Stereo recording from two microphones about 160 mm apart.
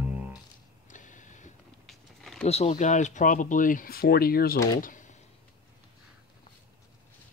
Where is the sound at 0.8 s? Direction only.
50° left (ahead or behind).